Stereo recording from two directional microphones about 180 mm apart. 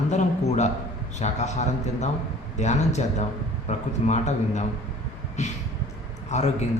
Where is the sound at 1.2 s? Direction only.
40° left (ahead or behind).